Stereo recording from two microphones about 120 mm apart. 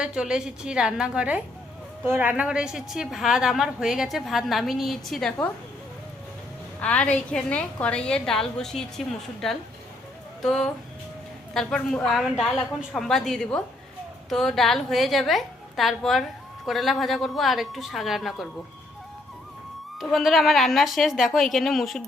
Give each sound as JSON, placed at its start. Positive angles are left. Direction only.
{"t": 0.0, "sound": "a woman's voice", "side_deg": -5}
{"t": 6.7, "sound": "a woman's voice", "side_deg": 10}
{"t": 20.0, "sound": "a woman's voice", "side_deg": 0}